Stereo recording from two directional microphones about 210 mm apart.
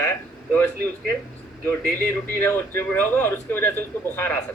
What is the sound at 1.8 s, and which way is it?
Speech, 45° right (ahead or behind).